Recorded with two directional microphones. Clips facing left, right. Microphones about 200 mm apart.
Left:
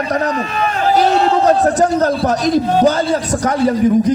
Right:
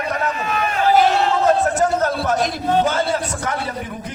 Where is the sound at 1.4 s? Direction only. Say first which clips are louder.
Left 4 dB; 35° left (ahead or behind).